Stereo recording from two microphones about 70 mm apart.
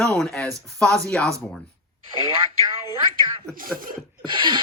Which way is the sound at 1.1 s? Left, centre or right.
Centre.